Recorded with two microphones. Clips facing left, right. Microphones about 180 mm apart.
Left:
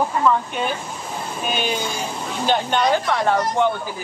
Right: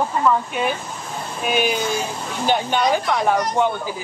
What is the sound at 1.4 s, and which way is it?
Speech, 10° right (ahead or behind).